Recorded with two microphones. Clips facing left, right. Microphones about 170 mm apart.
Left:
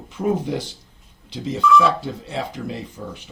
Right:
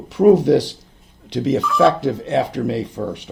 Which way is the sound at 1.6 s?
55° right (ahead or behind).